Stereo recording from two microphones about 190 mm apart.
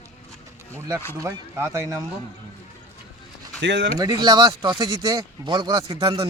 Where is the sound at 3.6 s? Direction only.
70° right (ahead or behind).